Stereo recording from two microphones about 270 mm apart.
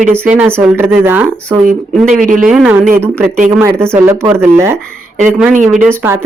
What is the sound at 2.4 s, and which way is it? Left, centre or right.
Speech, centre.